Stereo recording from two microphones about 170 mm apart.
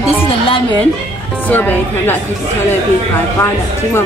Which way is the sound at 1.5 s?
10° left (ahead or behind).